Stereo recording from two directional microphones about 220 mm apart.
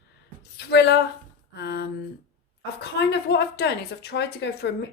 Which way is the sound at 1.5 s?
50° left (ahead or behind).